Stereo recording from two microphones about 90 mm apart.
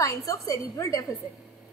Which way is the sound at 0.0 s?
40° left (ahead or behind).